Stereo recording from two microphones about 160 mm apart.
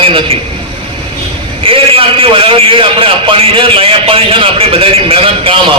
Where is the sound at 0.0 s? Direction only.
35° right (ahead or behind).